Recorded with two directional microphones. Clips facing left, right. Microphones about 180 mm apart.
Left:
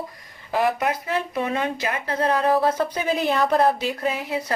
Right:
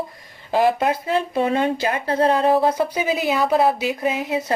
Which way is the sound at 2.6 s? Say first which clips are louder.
Right 2 dB; 10° right (ahead or behind).